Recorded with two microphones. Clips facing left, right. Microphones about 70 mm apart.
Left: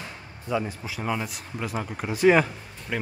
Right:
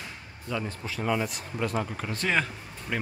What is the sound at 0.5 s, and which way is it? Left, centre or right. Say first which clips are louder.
Speech: left 4 dB; centre.